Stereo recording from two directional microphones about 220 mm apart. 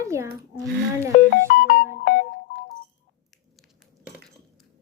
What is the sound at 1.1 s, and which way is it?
Music, 40° left (ahead or behind).